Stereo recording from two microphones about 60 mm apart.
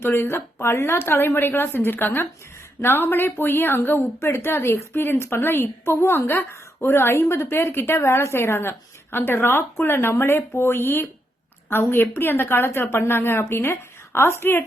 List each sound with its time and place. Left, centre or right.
0.0 s a woman's voice: left